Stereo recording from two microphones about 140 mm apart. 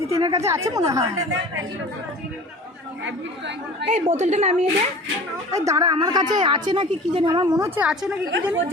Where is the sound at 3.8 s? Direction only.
55° right (ahead or behind).